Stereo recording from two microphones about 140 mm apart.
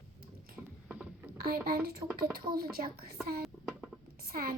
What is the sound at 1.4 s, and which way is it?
A woman's voice, 90° right.